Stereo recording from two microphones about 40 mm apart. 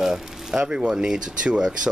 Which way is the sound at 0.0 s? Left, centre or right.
Centre.